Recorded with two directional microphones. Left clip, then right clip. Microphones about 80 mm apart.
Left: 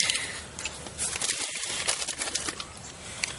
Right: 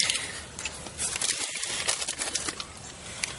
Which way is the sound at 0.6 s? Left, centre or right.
Centre.